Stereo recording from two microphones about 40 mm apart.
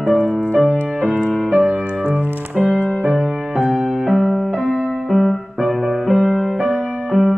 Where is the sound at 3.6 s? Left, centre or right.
Centre.